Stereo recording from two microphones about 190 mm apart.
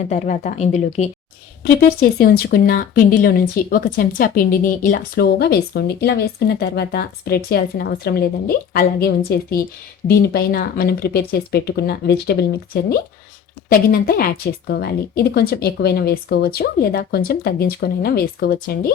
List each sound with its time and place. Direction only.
0.1 s speech: 40° left (ahead or behind)
1.6 s speech: 55° left (ahead or behind)